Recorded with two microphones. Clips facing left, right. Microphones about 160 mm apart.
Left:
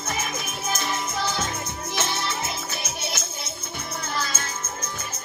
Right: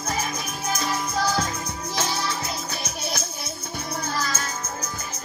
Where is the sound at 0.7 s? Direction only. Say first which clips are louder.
Right 2 dB; 25° left (ahead or behind).